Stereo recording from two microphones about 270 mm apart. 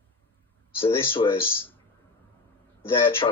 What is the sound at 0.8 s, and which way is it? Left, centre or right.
Speech, centre.